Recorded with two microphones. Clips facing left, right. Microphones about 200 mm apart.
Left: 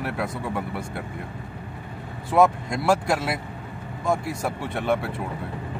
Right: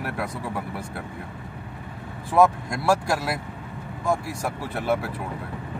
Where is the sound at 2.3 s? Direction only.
20° left (ahead or behind).